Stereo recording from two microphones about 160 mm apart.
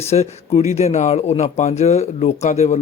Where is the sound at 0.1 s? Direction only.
40° left (ahead or behind).